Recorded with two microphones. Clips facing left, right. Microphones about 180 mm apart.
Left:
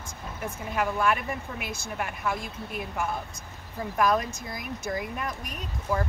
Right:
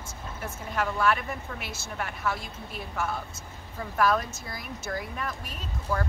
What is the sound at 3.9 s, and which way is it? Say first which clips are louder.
Speech: left 1 dB; 15° left (ahead or behind).